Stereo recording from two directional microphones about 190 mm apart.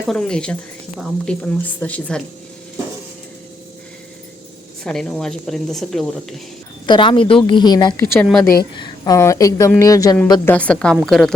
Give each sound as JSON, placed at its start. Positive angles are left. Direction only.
{"t": 0.0, "sound": "speech", "side_deg": 5}
{"t": 4.8, "sound": "speech", "side_deg": 5}
{"t": 6.8, "sound": "a woman's voice", "side_deg": 25}
{"t": 8.1, "sound": "speech", "side_deg": 0}
{"t": 8.7, "sound": "a woman's voice", "side_deg": 20}
{"t": 10.5, "sound": "speech", "side_deg": 5}